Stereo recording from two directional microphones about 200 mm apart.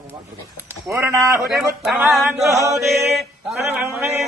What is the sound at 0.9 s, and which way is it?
Music, 15° right (ahead or behind).